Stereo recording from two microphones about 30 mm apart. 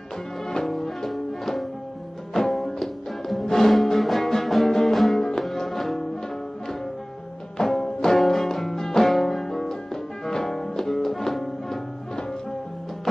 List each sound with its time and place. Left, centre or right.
0.7 s music: centre
3.4 s music: centre
3.7 s music: centre
7.5 s music: centre